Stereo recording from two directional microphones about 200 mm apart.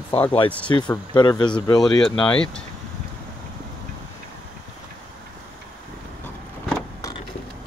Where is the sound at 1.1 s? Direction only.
25° left (ahead or behind).